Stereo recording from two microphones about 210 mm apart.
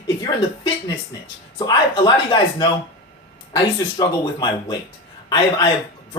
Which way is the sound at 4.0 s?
20° left (ahead or behind).